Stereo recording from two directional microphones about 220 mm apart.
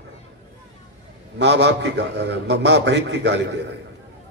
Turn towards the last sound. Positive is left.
turn(degrees=-50)  # may be behind; listen again after turning